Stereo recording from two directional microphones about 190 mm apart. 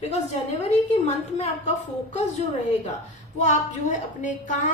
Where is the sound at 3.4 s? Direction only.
40° left (ahead or behind).